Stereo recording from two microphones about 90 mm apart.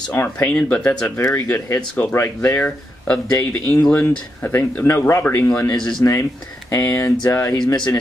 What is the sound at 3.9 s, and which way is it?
Speech, 20° left (ahead or behind).